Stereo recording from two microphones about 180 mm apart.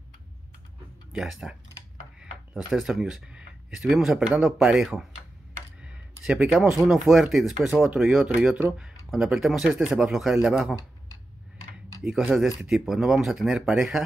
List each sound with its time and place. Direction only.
1.1 s speech: 5° right (ahead or behind)
5.8 s a sound: 5° right (ahead or behind)
6.9 s speech: centre (ahead or behind)
12.0 s speech: 5° right (ahead or behind)